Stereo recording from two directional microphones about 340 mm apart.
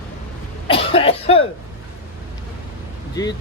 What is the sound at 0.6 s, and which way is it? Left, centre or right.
Cough, centre.